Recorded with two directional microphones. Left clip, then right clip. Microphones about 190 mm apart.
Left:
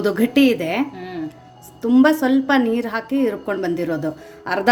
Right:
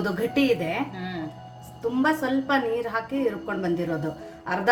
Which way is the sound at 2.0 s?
55° left (ahead or behind).